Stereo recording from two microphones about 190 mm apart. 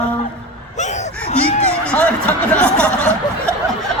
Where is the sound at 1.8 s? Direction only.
5° left (ahead or behind).